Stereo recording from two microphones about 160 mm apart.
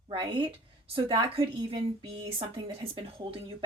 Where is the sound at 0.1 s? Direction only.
30° right (ahead or behind).